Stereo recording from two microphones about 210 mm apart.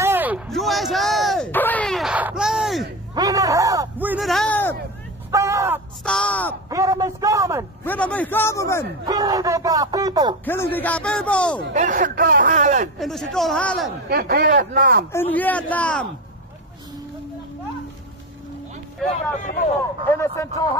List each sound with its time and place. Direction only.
0.0 s a sound: 10° right (ahead or behind)
3.2 s a sound: 15° right (ahead or behind); by 4.7 s 5° left (ahead or behind)
5.3 s a sound: 15° right (ahead or behind)
6.0 s speech: 5° left (ahead or behind)
6.7 s speech: 15° right (ahead or behind)
7.8 s speech: 5° left (ahead or behind)
9.0 s speech: 15° right (ahead or behind)
10.4 s speech: 10° left (ahead or behind)
11.7 s speech: 40° right (ahead or behind)
13.0 s speech: centre (ahead or behind)
14.0 s speech: 50° right (ahead or behind)
15.1 s speech: 10° left (ahead or behind)
20.1 s speech: 15° left (ahead or behind)